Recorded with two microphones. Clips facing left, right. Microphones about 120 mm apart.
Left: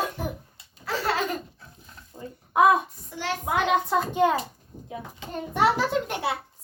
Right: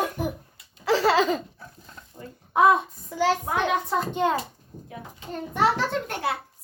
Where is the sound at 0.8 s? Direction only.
90° right.